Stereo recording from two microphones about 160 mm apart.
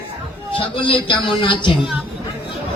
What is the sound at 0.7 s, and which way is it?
A man's voice, 30° left (ahead or behind).